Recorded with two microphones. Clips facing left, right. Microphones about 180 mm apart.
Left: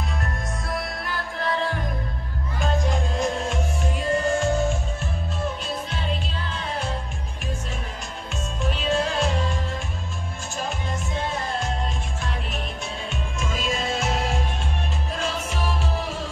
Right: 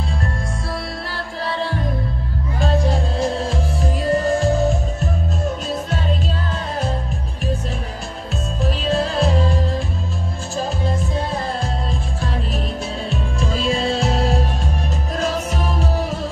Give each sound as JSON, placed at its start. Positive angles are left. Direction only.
{"t": 2.6, "sound": "music", "side_deg": -35}
{"t": 8.6, "sound": "music", "side_deg": -35}
{"t": 13.1, "sound": "music", "side_deg": -35}